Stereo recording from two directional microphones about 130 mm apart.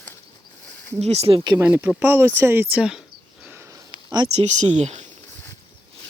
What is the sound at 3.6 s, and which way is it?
Sniff, 30° right (ahead or behind).